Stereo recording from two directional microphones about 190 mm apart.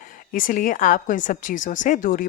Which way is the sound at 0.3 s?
45° left (ahead or behind).